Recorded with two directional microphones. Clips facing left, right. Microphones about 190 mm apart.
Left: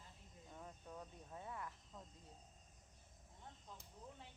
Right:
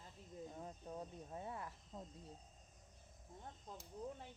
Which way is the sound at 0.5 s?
30° right (ahead or behind).